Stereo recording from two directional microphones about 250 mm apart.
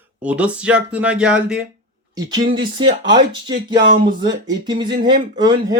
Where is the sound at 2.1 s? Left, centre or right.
Centre.